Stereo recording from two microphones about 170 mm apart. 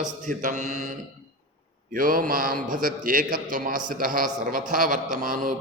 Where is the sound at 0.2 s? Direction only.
50° right (ahead or behind).